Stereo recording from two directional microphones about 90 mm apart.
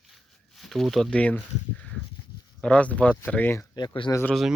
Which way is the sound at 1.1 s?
15° left (ahead or behind).